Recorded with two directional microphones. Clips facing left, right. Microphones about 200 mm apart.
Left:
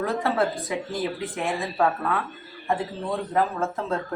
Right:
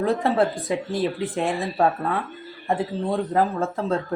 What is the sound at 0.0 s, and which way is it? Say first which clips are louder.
Speech: right 3 dB; 30° right (ahead or behind).